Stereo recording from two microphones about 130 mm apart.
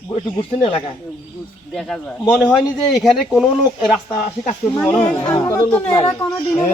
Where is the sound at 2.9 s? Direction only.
Centre (ahead or behind).